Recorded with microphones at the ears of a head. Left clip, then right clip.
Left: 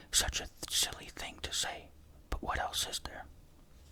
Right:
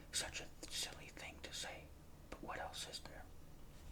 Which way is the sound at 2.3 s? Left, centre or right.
Left.